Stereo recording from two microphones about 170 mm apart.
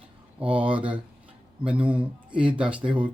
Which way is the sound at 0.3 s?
10° right (ahead or behind).